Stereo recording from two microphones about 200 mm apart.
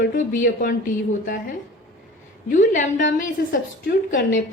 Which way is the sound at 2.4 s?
40° left (ahead or behind).